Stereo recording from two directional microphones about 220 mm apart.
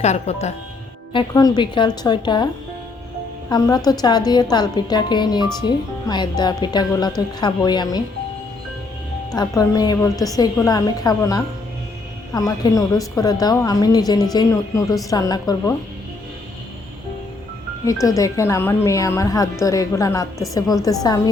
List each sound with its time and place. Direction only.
0.0 s speech: 30° left (ahead or behind)
1.1 s speech: 15° left (ahead or behind)
3.5 s speech: 20° left (ahead or behind)
9.3 s a woman's voice: 15° left (ahead or behind)
18.2 s a woman's voice: 15° left (ahead or behind)